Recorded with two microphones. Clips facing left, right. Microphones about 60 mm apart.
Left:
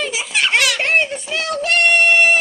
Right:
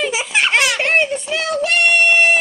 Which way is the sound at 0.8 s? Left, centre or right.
Centre.